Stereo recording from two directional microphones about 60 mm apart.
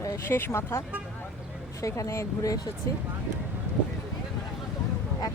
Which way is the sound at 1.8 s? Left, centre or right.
Left.